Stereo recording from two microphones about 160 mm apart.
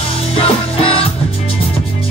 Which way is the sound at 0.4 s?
35° left (ahead or behind).